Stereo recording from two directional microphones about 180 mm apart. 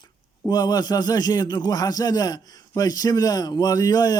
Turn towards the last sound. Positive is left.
turn(degrees=20)  # may be behind; listen again after turning